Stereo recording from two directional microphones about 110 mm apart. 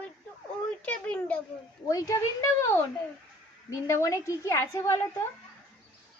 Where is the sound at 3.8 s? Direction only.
25° left (ahead or behind).